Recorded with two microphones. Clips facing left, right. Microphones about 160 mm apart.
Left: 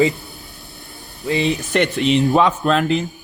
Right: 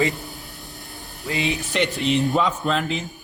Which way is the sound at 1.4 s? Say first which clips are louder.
Left 4 dB; 40° left (ahead or behind).